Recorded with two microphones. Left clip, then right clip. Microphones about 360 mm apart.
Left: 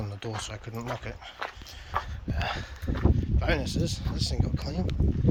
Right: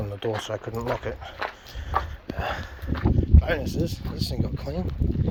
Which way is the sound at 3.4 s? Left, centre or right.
Centre.